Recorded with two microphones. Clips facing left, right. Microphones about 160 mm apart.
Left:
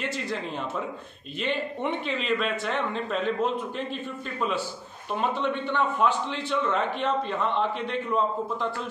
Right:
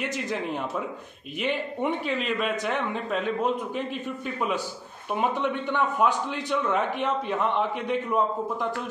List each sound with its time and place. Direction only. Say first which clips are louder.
0.0 s a man's voice: right 2 dB; 15° right (ahead or behind)